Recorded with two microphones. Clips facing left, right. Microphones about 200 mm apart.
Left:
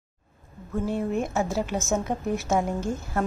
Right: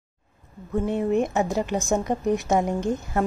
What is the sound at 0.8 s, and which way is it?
Speech, centre (ahead or behind).